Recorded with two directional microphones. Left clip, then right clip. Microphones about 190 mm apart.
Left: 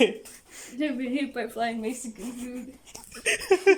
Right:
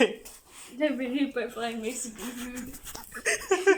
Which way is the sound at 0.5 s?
35° left (ahead or behind).